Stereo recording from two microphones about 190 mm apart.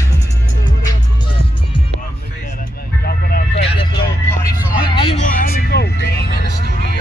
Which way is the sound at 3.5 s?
30° left (ahead or behind).